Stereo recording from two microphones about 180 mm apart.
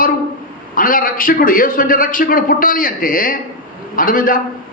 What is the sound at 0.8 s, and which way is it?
A man's voice, 50° left (ahead or behind).